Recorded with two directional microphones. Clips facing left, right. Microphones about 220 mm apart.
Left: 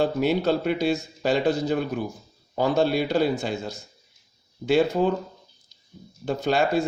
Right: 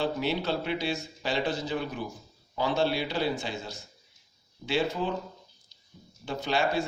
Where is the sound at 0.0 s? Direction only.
45° left (ahead or behind).